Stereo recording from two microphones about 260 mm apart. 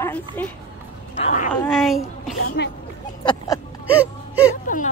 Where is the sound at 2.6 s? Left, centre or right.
Left.